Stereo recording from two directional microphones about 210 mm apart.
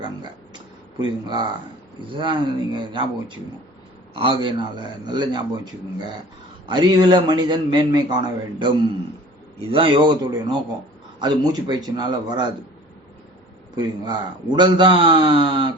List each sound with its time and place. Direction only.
0.9 s a man's voice: 20° right (ahead or behind)
6.7 s a man's voice: 20° right (ahead or behind)
13.7 s a man's voice: 20° right (ahead or behind)